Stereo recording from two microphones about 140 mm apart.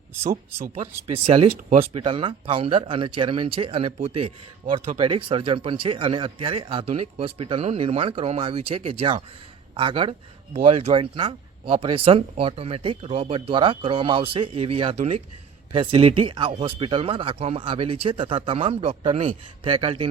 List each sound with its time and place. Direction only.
0.8 s a man's voice: 45° right (ahead or behind)